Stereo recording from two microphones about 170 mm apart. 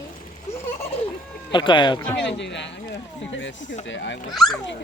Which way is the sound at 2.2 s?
90° left.